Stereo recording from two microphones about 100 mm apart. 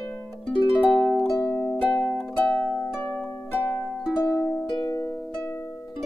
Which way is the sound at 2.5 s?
20° left (ahead or behind).